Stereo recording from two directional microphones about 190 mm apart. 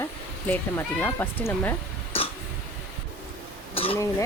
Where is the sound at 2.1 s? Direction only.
30° left (ahead or behind).